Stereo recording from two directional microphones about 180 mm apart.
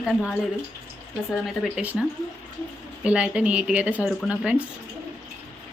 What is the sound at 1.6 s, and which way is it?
Speech, 5° right (ahead or behind).